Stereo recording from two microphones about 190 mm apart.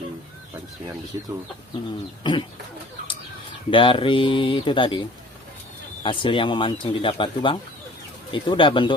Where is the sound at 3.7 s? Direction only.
25° left (ahead or behind).